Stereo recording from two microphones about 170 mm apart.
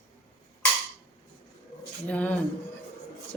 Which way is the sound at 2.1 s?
10° left (ahead or behind).